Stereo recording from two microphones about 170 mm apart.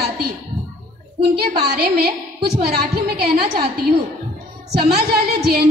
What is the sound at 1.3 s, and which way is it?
A woman's voice, 70° right (ahead or behind).